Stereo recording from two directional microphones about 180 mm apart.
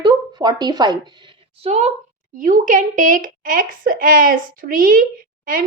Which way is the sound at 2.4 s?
45° right (ahead or behind).